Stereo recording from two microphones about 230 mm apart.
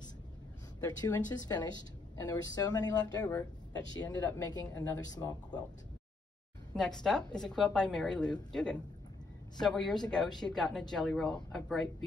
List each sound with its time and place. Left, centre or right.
0.8 s speech: centre
6.7 s a woman's voice: centre